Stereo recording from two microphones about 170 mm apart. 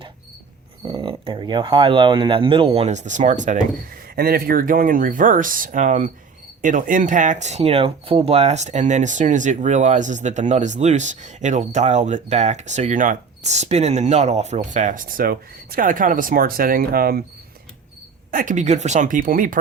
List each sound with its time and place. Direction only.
0.9 s speech: 30° right (ahead or behind)
4.1 s speech: 65° right (ahead or behind)
18.3 s speech: 50° right (ahead or behind)